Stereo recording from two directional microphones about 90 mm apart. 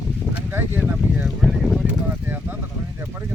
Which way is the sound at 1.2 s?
Centre (ahead or behind).